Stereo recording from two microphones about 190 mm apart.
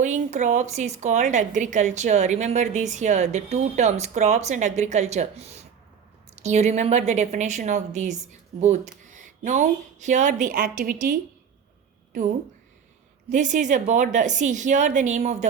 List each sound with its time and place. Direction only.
0.0 s a woman's voice: 40° right (ahead or behind)
13.3 s a woman's voice: 40° right (ahead or behind)